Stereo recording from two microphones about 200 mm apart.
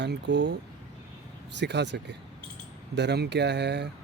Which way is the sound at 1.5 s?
60° right (ahead or behind).